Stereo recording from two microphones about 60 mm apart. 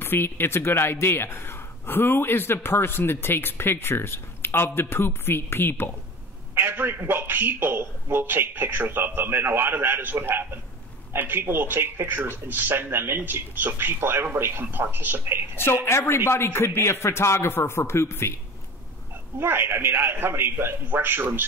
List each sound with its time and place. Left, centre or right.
0.0 s speech: left
6.5 s a man's voice: right
15.5 s a man's voice: left
19.4 s a man's voice: right